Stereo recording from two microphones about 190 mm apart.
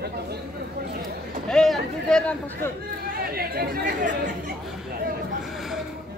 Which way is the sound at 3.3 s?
55° right (ahead or behind).